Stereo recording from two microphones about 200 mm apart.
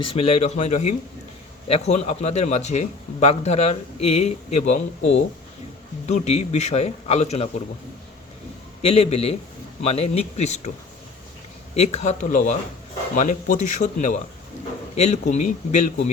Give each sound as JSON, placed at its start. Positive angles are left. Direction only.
{"t": 0.0, "sound": "a man's voice", "side_deg": 30}
{"t": 8.8, "sound": "a man's voice", "side_deg": 30}
{"t": 11.7, "sound": "a man's voice", "side_deg": 30}